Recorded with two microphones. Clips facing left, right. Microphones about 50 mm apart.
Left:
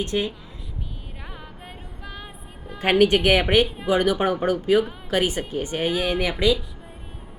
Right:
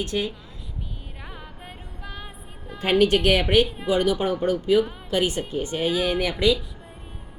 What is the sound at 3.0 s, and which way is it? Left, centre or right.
Speech, left.